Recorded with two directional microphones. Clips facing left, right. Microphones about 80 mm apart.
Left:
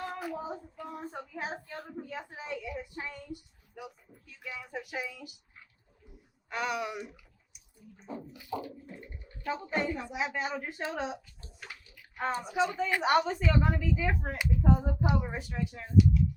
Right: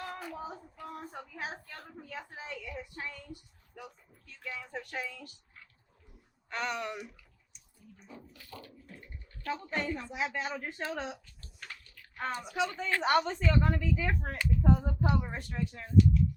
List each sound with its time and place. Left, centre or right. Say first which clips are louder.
0.1 s child singing: left 4 dB; centre
0.5 s speech: left 3 dB; centre
1.1 s speech: left 4 dB; left
1.7 s speech: left 4 dB; centre
7.9 s speech: left 9 dB; left
8.3 s speech: left 11 dB; centre
11.6 s bathtub: even; centre
12.6 s speech: left 1 dB; centre